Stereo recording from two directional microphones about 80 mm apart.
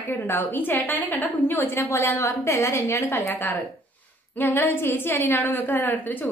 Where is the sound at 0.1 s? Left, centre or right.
Left.